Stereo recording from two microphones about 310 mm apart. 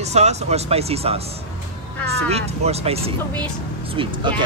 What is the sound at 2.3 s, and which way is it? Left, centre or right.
Speech, centre.